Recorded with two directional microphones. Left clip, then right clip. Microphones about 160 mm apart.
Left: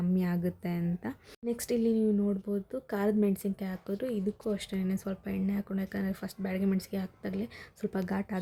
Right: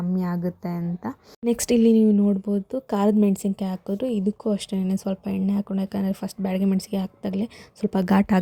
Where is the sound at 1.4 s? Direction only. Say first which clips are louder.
Right 10 dB; 50° right (ahead or behind).